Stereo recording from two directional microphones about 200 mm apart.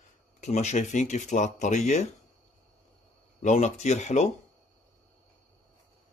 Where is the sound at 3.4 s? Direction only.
35° left (ahead or behind).